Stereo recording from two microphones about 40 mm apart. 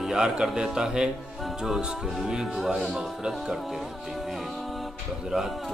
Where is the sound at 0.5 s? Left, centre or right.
Centre.